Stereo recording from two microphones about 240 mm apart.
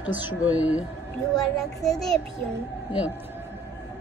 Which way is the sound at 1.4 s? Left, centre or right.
Centre.